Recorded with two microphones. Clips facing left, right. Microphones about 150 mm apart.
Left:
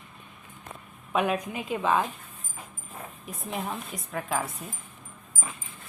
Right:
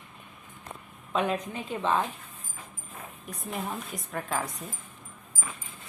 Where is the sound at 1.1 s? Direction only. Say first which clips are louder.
Left 2 dB; 10° left (ahead or behind).